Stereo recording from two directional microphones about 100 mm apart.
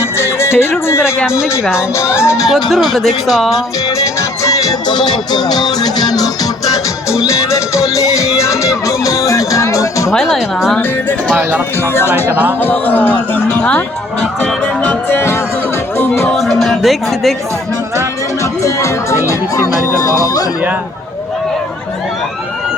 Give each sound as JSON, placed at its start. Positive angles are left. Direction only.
{"t": 0.0, "sound": "music", "side_deg": 25}
{"t": 1.4, "sound": "speech", "side_deg": -10}
{"t": 2.0, "sound": "speech", "side_deg": 25}
{"t": 2.5, "sound": "speech", "side_deg": 0}
{"t": 3.5, "sound": "music", "side_deg": 35}
{"t": 4.9, "sound": "music", "side_deg": 45}
{"t": 10.1, "sound": "speech", "side_deg": 0}
{"t": 11.9, "sound": "speech", "side_deg": 25}
{"t": 12.3, "sound": "speech", "side_deg": -15}
{"t": 12.5, "sound": "speech", "side_deg": 20}
{"t": 14.4, "sound": "music", "side_deg": 15}
{"t": 16.3, "sound": "music", "side_deg": 0}
{"t": 18.6, "sound": "speech", "side_deg": 30}